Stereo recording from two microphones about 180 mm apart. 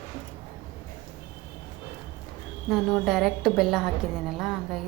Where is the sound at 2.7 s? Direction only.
Centre (ahead or behind).